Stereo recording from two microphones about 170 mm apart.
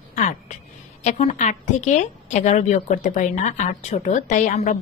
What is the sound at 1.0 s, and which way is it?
A woman's voice, 40° left (ahead or behind).